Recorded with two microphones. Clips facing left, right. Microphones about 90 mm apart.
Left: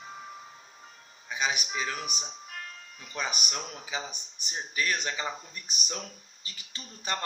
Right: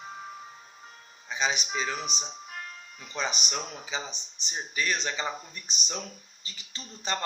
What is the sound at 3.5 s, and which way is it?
A man's voice, 10° left (ahead or behind).